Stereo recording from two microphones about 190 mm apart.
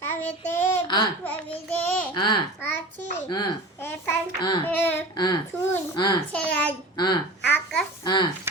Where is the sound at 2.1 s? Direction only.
25° left (ahead or behind).